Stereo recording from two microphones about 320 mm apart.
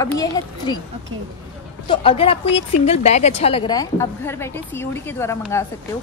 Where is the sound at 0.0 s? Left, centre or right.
Centre.